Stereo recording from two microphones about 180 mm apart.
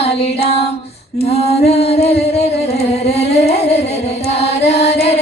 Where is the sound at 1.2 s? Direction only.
35° left (ahead or behind).